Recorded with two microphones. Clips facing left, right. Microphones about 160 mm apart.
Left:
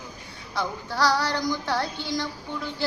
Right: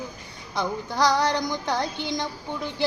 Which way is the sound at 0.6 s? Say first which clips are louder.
Right 2 dB; 20° right (ahead or behind).